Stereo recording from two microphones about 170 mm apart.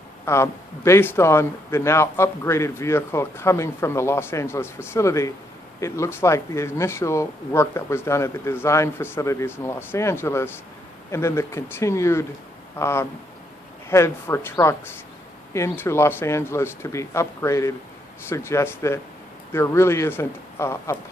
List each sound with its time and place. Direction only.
0.2 s a man's voice: 15° left (ahead or behind)